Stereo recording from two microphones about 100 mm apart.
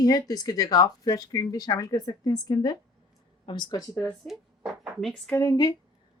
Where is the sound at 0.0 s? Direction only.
40° left (ahead or behind).